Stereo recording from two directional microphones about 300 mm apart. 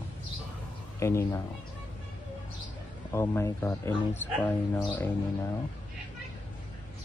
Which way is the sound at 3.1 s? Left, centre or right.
Centre.